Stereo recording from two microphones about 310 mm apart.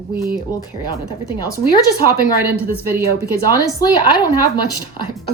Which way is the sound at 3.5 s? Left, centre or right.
Centre.